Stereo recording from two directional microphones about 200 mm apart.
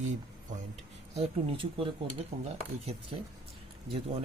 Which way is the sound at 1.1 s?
25° right (ahead or behind).